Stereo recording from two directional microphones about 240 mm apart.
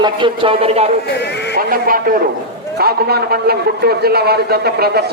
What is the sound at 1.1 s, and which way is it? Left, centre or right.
Speech, left.